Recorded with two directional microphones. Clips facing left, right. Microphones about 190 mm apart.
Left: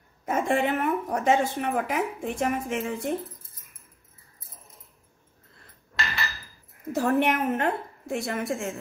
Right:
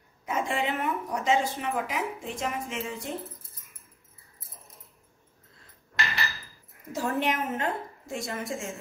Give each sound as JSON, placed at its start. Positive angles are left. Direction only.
{"t": 0.2, "sound": "a woman's voice", "side_deg": 50}
{"t": 6.9, "sound": "a woman's voice", "side_deg": 60}